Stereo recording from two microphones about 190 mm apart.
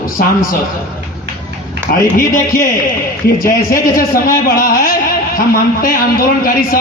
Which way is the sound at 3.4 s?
45° left (ahead or behind).